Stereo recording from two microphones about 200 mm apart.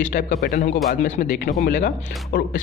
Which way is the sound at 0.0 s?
40° left (ahead or behind).